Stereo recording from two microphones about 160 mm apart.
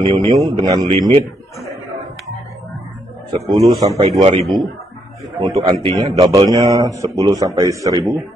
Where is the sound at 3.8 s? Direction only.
20° right (ahead or behind).